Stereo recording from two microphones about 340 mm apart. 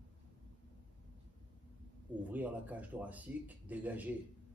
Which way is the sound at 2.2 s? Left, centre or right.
Centre.